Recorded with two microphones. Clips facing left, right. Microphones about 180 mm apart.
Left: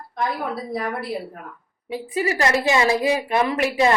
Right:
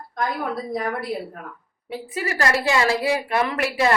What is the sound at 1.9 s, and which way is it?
A woman's voice, 15° left (ahead or behind).